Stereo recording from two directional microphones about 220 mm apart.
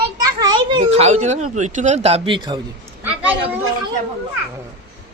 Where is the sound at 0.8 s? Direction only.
30° right (ahead or behind).